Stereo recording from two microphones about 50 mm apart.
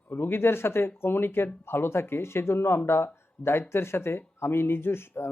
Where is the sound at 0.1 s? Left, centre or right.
Left.